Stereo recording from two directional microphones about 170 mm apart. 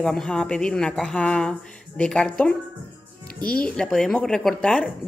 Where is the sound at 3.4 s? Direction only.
60° left (ahead or behind).